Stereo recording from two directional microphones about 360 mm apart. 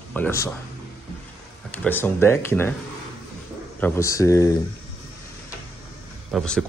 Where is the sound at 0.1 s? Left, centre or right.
Centre.